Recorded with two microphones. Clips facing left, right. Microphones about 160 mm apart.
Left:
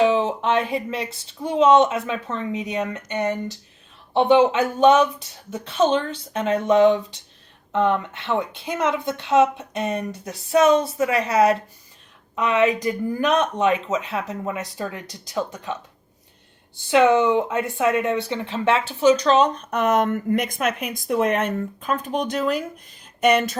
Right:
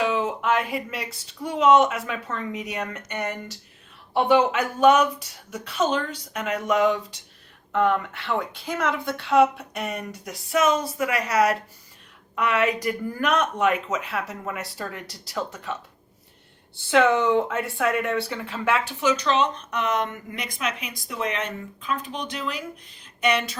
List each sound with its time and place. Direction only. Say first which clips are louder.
0.0 s a woman's voice: left 5 dB; 25° left (ahead or behind); by 23.6 s 45° left (ahead or behind)